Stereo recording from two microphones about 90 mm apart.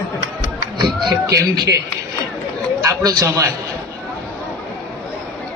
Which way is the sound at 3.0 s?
40° right (ahead or behind).